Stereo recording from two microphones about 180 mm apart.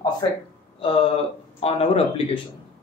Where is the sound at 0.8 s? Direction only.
30° left (ahead or behind).